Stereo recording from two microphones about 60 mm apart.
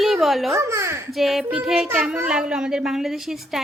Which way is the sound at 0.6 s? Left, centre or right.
Right.